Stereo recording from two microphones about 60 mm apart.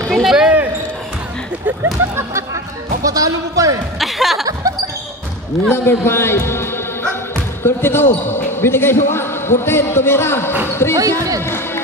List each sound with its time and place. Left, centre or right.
0.1 s speech: centre
3.1 s speech: right
4.0 s music: centre
5.7 s a man's voice: left
11.0 s speech: right
11.4 s music: left